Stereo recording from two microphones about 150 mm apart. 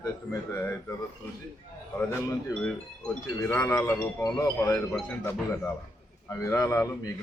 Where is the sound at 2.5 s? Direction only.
5° left (ahead or behind).